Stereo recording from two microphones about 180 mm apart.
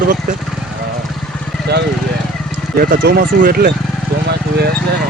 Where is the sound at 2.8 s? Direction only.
55° right (ahead or behind).